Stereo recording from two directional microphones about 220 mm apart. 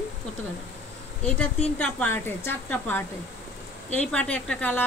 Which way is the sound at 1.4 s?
5° left (ahead or behind).